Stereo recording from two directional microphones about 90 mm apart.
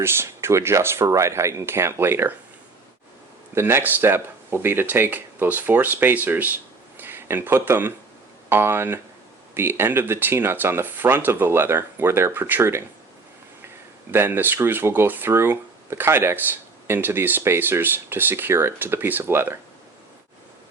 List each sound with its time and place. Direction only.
0.0 s speech: 30° right (ahead or behind)
3.5 s speech: 25° right (ahead or behind)
14.1 s speech: 25° right (ahead or behind)